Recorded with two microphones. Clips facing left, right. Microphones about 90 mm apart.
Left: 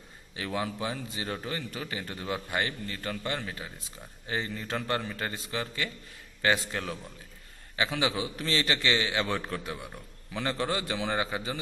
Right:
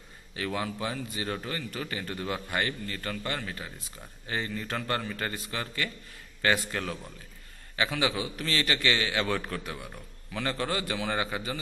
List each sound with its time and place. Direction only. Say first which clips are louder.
0.4 s a man's voice: even; 20° left (ahead or behind)